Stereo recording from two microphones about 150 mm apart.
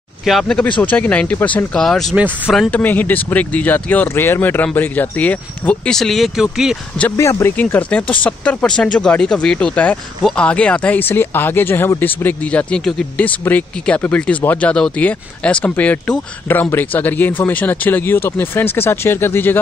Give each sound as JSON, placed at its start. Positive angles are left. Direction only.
{"t": 0.2, "sound": "speech", "side_deg": 0}
{"t": 2.7, "sound": "speech", "side_deg": 10}
{"t": 7.1, "sound": "speech", "side_deg": 20}